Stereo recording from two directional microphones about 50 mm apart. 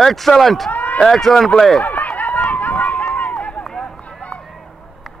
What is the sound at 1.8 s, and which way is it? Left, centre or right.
Run, left.